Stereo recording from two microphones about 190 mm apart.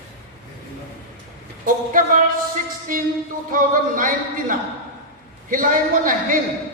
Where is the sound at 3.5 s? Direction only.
45° right (ahead or behind).